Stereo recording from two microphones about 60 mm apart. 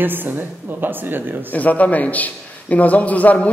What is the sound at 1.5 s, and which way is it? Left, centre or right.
A man's voice, left.